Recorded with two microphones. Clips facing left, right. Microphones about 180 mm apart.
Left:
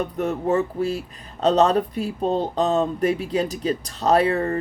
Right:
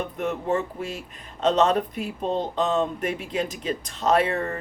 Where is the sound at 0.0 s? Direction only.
40° left (ahead or behind).